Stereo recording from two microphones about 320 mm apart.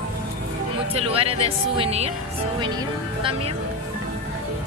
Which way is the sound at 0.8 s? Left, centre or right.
Centre.